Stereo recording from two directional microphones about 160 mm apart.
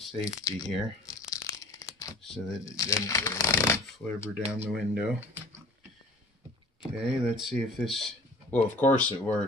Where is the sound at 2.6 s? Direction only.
20° left (ahead or behind).